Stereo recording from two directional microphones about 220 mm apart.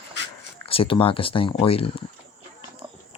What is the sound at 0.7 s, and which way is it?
Speech, 25° left (ahead or behind).